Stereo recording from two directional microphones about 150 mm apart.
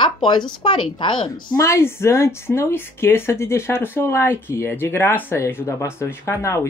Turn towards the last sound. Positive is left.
turn(degrees=20)  # may be behind; listen again after turning